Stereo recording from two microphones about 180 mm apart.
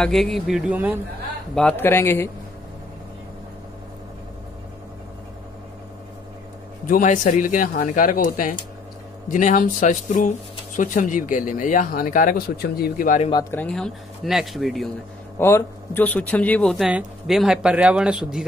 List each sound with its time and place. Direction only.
0.0 s speech: centre (ahead or behind)
1.5 s speech: 5° left (ahead or behind)
6.9 s speech: 45° left (ahead or behind)
13.3 s speech: 20° left (ahead or behind)
13.6 s speech: 5° left (ahead or behind)
15.3 s speech: 15° left (ahead or behind); by 18.4 s 5° right (ahead or behind)